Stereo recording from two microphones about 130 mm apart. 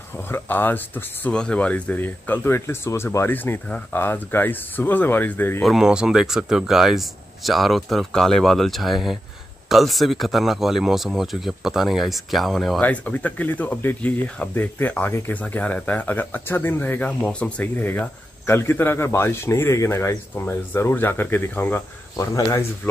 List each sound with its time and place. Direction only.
0.3 s speech: 15° left (ahead or behind)
5.6 s speech: centre (ahead or behind)
12.8 s speech: 10° left (ahead or behind)